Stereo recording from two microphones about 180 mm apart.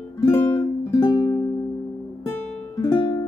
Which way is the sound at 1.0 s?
20° left (ahead or behind).